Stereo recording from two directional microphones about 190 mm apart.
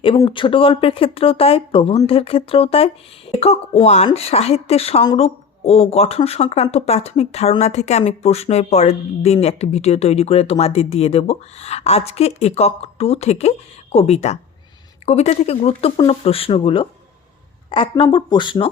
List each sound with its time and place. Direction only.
0.3 s speech: 25° left (ahead or behind)